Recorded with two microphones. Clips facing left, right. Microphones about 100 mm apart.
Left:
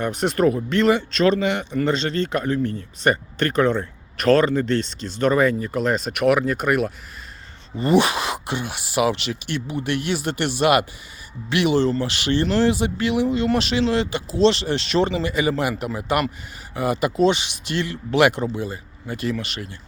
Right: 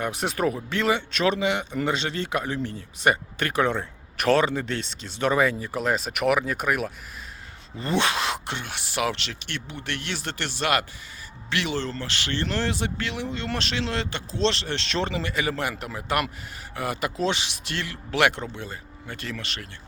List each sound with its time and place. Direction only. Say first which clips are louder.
0.0 s speech: left 6 dB; 5° right (ahead or behind)